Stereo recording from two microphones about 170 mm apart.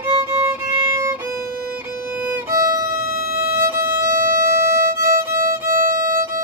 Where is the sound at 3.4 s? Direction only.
15° right (ahead or behind).